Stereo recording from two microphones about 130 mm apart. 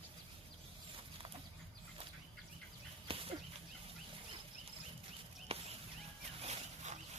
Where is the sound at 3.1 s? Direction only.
45° right (ahead or behind).